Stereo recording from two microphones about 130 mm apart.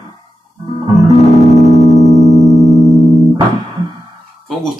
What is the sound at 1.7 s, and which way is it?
Music, 60° left (ahead or behind).